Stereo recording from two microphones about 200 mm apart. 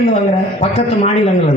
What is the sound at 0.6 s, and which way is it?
Speech, 30° left (ahead or behind).